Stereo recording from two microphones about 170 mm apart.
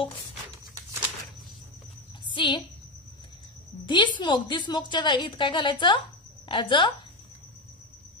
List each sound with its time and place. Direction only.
2.2 s a woman's voice: 30° left (ahead or behind)
3.8 s a woman's voice: 25° left (ahead or behind)